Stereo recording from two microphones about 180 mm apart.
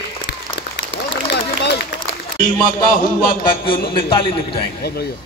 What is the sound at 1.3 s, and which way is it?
Run, 70° left (ahead or behind).